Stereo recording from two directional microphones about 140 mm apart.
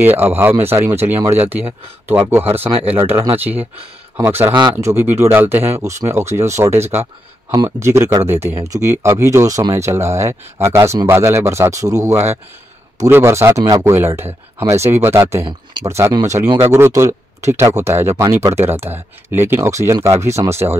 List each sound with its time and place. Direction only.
0.2 s speech: 15° right (ahead or behind)
2.7 s speech: 45° right (ahead or behind)
3.0 s speech: 15° right (ahead or behind)
15.4 s speech: 30° right (ahead or behind)